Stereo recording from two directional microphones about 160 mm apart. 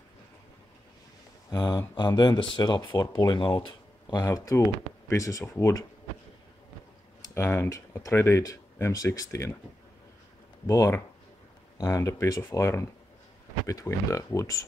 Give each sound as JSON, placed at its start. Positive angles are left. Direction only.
{"t": 1.5, "sound": "speech", "side_deg": 20}
{"t": 4.1, "sound": "speech", "side_deg": 20}
{"t": 7.3, "sound": "speech", "side_deg": 15}
{"t": 10.7, "sound": "speech", "side_deg": 20}